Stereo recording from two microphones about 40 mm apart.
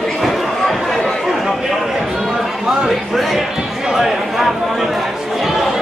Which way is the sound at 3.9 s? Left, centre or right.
Centre.